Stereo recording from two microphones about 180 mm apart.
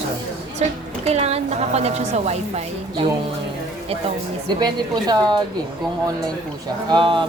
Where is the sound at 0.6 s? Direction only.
35° right (ahead or behind).